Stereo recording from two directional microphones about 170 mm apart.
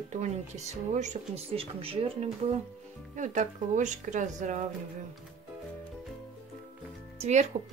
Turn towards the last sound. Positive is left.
turn(degrees=-40)  # may be behind; listen again after turning